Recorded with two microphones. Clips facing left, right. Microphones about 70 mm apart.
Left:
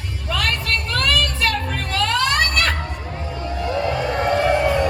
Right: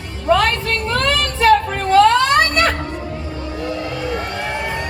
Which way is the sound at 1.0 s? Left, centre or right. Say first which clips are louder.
Right 5 dB; right.